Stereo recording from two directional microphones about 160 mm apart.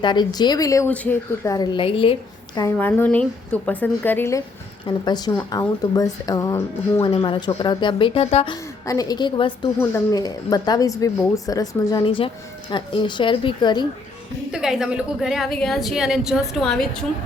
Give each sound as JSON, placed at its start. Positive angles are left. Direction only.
{"t": 0.0, "sound": "speech", "side_deg": 25}
{"t": 0.9, "sound": "a woman's voice", "side_deg": 10}
{"t": 1.5, "sound": "speech", "side_deg": 25}
{"t": 2.6, "sound": "a woman's voice", "side_deg": 15}
{"t": 7.0, "sound": "speech", "side_deg": 35}
{"t": 8.9, "sound": "speech", "side_deg": 25}
{"t": 9.7, "sound": "speech", "side_deg": 15}
{"t": 12.0, "sound": "speech", "side_deg": 35}
{"t": 14.5, "sound": "a woman's voice", "side_deg": -5}